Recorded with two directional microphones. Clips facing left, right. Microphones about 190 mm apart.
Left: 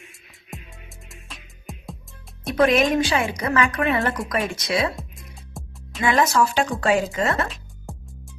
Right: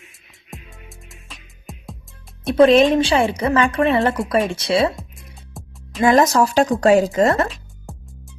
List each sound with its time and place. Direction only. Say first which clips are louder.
0.5 s music: right 1 dB; centre (ahead or behind)
2.6 s a woman's voice: right 6 dB; 30° right (ahead or behind)
4.9 s music: even; centre (ahead or behind)
6.0 s speech: right 5 dB; 40° right (ahead or behind)
7.4 s music: right 5 dB; centre (ahead or behind)